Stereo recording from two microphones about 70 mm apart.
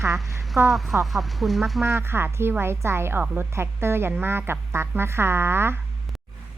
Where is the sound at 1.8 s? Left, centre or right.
Right.